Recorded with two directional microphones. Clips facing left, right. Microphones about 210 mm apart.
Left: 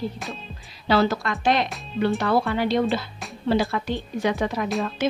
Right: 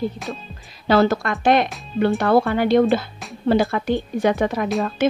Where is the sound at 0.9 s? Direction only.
50° right (ahead or behind).